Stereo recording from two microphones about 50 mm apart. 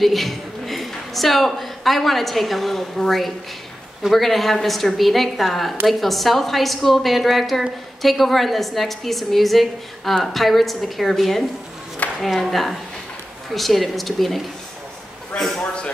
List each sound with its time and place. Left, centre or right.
0.0 s a woman's voice: centre
15.6 s speech: left